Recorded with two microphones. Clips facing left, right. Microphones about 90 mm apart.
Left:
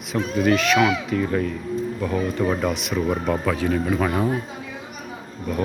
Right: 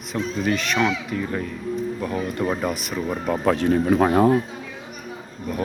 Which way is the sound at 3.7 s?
35° right (ahead or behind).